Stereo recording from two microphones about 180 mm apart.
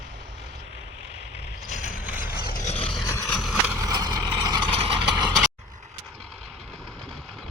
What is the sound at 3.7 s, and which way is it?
Vehicle, 20° right (ahead or behind).